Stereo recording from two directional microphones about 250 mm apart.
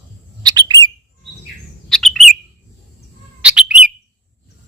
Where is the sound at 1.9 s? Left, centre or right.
Centre.